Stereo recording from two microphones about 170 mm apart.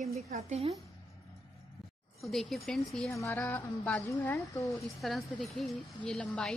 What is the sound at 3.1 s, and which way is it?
Music, 15° left (ahead or behind).